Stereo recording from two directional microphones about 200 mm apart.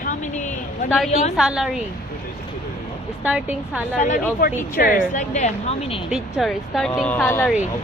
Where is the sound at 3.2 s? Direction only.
5° right (ahead or behind).